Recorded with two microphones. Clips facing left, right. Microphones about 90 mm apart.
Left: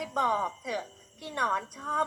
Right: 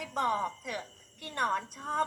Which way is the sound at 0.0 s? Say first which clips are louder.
Left 3 dB; 10° left (ahead or behind).